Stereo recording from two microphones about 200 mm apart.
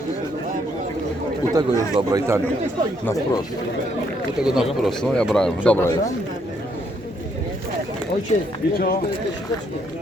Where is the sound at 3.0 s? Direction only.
15° left (ahead or behind).